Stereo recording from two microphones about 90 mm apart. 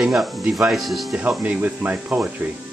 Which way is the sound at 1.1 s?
15° right (ahead or behind).